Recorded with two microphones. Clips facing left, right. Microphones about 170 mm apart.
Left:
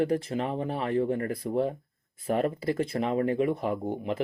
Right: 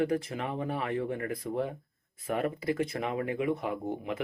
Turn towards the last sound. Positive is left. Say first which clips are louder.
# left 3 dB
turn(degrees=35)  # may be behind; listen again after turning